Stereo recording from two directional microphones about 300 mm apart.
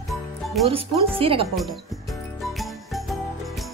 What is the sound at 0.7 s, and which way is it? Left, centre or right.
Speech, centre.